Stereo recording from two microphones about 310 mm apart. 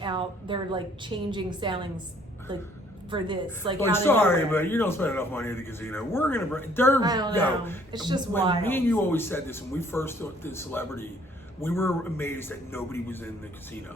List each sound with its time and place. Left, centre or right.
0.0 s a woman's voice: centre
3.8 s speech: centre
7.0 s a woman's voice: centre
7.3 s speech: centre
7.9 s a woman's voice: centre
8.6 s speech: centre